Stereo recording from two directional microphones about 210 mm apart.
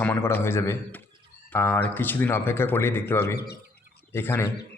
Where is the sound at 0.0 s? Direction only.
10° left (ahead or behind).